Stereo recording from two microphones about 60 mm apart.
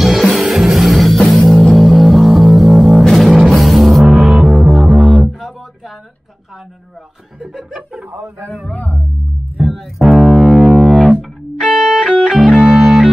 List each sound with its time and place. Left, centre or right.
0.0 s music: centre
7.3 s chuckle: centre
8.6 s music: left
9.7 s music: centre
11.9 s music: centre
12.7 s music: centre